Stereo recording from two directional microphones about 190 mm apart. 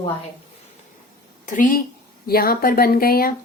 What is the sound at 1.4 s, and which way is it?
Speech, 45° left (ahead or behind).